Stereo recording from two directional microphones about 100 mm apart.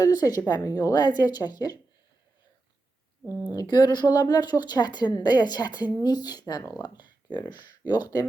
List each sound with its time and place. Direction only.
0.0 s speech: 40° left (ahead or behind)
3.5 s speech: 40° left (ahead or behind)